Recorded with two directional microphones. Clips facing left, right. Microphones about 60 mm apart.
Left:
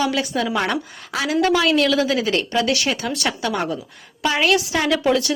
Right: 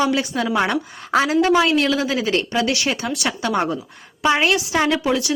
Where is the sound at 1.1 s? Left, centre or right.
Right.